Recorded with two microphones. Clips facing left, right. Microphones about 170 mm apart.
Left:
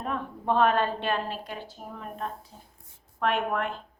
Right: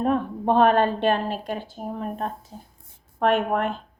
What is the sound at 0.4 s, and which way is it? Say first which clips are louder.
A woman's voice: right 5 dB; 35° right (ahead or behind).